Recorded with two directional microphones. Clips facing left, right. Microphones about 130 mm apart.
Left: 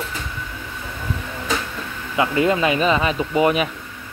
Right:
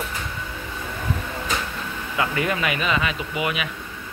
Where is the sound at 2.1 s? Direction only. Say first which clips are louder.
Left 6 dB; 25° left (ahead or behind).